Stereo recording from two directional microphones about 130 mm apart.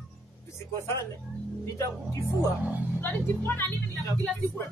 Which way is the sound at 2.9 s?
15° left (ahead or behind).